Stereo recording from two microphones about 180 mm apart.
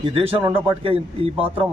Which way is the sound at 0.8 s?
30° right (ahead or behind).